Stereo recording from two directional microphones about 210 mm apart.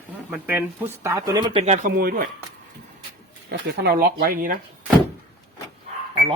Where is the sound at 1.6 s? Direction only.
35° right (ahead or behind).